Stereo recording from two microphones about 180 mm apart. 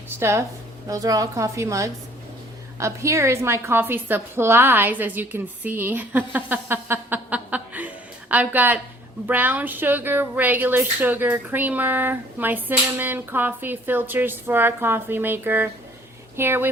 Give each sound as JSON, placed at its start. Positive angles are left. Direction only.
{"t": 0.2, "sound": "speech", "side_deg": -15}